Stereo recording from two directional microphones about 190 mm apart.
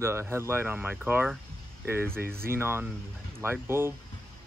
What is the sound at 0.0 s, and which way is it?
Speech, 15° right (ahead or behind).